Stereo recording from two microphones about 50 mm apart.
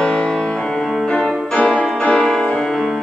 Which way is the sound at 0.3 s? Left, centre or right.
Centre.